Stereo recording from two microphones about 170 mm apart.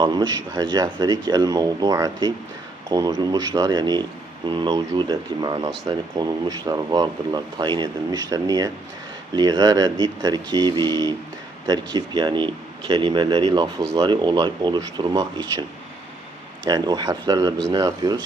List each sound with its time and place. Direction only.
0.0 s speech: 25° right (ahead or behind)
16.6 s speech: 25° right (ahead or behind)